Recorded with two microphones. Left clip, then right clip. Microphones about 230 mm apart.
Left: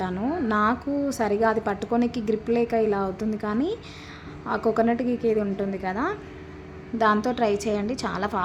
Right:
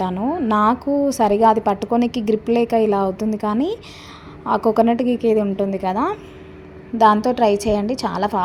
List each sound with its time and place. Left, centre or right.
0.0 s music: centre
0.5 s a woman's voice: right